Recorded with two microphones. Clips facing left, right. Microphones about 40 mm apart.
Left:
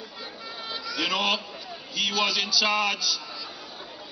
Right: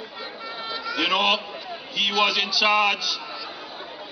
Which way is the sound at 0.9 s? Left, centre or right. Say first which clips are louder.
Right 4 dB; right.